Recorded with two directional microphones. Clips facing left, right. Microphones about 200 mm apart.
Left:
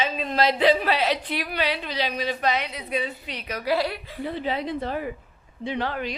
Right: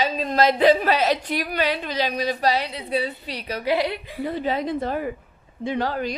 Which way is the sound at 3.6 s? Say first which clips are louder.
Right 2 dB; 20° right (ahead or behind).